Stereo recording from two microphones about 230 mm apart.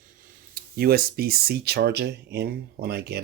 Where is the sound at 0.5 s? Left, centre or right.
Right.